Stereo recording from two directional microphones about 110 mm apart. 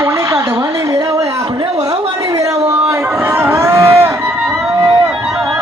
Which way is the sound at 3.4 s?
20° right (ahead or behind).